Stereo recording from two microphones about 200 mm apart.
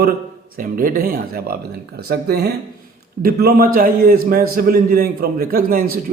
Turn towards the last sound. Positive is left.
turn(degrees=-45)  # may be behind; listen again after turning